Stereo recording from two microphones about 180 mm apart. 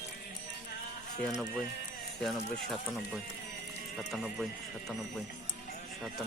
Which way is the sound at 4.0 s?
Centre (ahead or behind).